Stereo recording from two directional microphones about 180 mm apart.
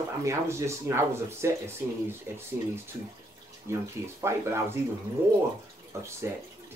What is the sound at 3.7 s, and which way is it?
Speech, 15° right (ahead or behind).